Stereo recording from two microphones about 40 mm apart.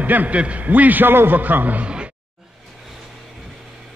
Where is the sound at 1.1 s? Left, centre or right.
Right.